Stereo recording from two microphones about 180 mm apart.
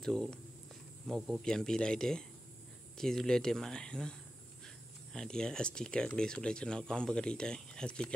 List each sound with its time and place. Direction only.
0.0 s speech: 5° left (ahead or behind)
5.1 s speech: 5° left (ahead or behind)